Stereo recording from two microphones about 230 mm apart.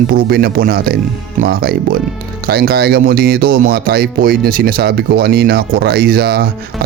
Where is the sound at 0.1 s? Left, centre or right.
Right.